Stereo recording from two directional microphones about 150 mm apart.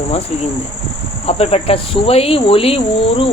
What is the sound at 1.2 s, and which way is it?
Speech, 40° left (ahead or behind).